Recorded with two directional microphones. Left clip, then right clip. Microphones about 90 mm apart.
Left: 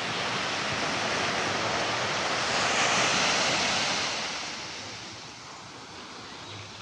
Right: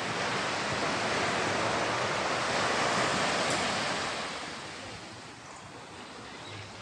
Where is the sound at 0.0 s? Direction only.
5° right (ahead or behind).